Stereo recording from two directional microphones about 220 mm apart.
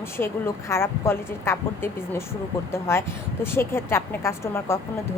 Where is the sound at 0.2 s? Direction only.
10° left (ahead or behind).